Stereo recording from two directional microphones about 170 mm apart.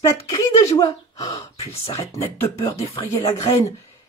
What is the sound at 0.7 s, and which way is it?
Speech, 20° left (ahead or behind).